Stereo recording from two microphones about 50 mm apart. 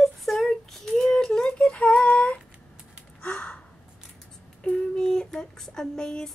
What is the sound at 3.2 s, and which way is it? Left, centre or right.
Gasp, left.